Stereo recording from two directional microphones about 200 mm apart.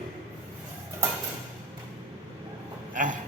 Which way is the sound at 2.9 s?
40° right (ahead or behind).